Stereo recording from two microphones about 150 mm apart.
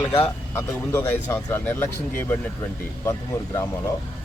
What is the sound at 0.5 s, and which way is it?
Speech, 15° left (ahead or behind).